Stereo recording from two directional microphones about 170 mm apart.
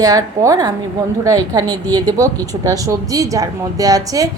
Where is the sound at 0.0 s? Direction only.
20° right (ahead or behind).